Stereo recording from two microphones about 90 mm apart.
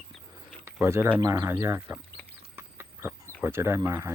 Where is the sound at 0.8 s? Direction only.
30° right (ahead or behind).